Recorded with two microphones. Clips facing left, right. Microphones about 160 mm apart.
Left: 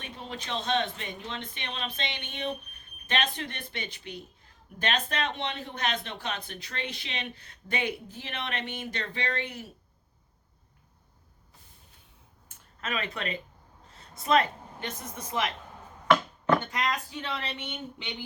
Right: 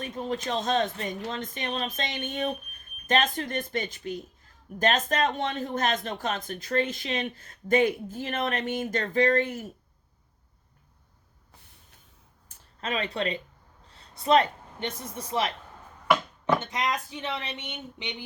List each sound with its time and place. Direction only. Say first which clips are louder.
0.0 s speech: right 9 dB; 45° right (ahead or behind)
12.5 s a sound: right 3 dB; 30° right (ahead or behind)
14.2 s speech: right 3 dB; 30° right (ahead or behind)
16.6 s speech: right 1 dB; 20° right (ahead or behind)